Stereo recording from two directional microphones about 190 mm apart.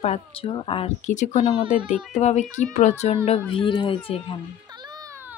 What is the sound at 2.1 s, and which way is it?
Speech, 35° left (ahead or behind).